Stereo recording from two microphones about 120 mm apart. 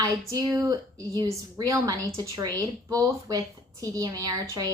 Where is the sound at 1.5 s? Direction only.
30° right (ahead or behind).